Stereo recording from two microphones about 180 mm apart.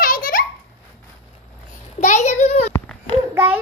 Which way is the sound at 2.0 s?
40° left (ahead or behind).